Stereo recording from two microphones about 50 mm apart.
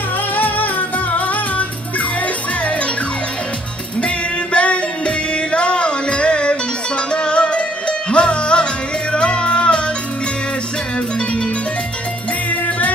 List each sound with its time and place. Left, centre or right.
0.3 s music: left
4.5 s music: left
12.5 s music: left